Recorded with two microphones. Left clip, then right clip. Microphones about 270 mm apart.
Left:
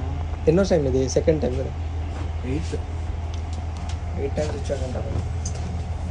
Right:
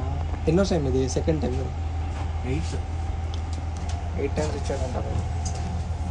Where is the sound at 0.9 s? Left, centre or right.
Left.